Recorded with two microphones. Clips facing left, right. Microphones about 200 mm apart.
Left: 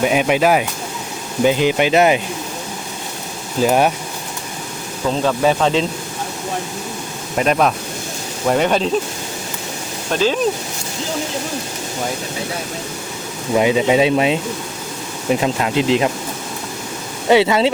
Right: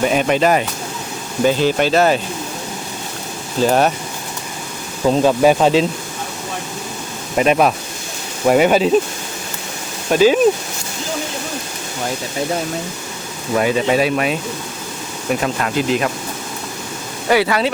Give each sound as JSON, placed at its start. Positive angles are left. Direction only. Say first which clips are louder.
{"t": 0.0, "sound": "speech", "louder": "even", "side_deg": 5}
{"t": 3.6, "sound": "speech", "louder": "even", "side_deg": 10}
{"t": 5.0, "sound": "speech", "louder": "right 4 dB", "side_deg": -15}
{"t": 7.3, "sound": "speech", "louder": "right 2 dB", "side_deg": -5}
{"t": 10.1, "sound": "speech", "louder": "right 5 dB", "side_deg": -10}
{"t": 13.5, "sound": "speech", "louder": "left 2 dB", "side_deg": 15}
{"t": 17.2, "sound": "speech", "louder": "left 3 dB", "side_deg": 20}